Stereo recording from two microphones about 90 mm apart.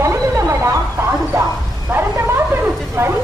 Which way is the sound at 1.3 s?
30° right (ahead or behind).